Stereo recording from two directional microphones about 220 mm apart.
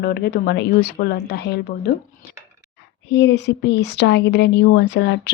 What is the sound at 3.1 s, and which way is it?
A woman's voice, 50° left (ahead or behind).